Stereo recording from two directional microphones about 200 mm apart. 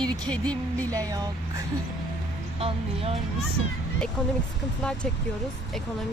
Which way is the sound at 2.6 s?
30° right (ahead or behind).